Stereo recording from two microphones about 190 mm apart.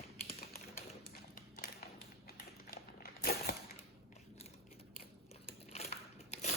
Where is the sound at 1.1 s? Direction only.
55° left (ahead or behind).